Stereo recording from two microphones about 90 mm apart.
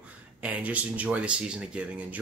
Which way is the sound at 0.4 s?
15° right (ahead or behind).